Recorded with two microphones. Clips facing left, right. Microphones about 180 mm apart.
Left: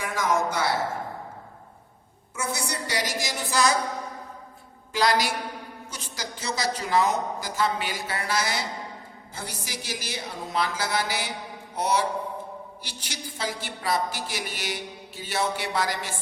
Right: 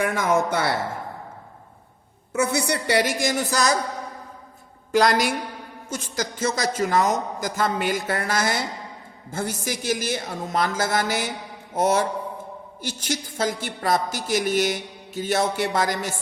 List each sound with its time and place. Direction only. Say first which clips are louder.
0.0 s speech: right 4 dB; 60° right (ahead or behind)
2.3 s a woman's voice: right 8 dB; 65° right (ahead or behind); by 3.7 s 45° right (ahead or behind)
4.9 s a woman's voice: right 4 dB; 50° right (ahead or behind)